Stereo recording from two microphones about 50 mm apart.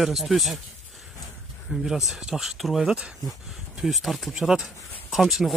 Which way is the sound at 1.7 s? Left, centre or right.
Centre.